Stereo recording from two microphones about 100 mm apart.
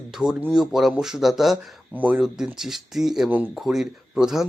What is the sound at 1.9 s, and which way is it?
Speech, 15° right (ahead or behind).